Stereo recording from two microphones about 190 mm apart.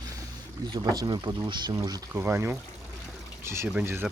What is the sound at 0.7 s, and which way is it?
Speech, 20° right (ahead or behind).